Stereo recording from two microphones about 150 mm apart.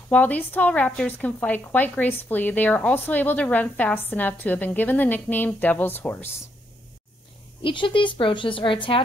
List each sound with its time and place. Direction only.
0.1 s a woman's voice: 10° left (ahead or behind)
7.6 s speech: 35° left (ahead or behind)